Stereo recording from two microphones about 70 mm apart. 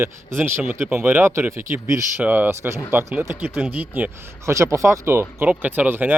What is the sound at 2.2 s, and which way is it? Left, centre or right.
Speech, right.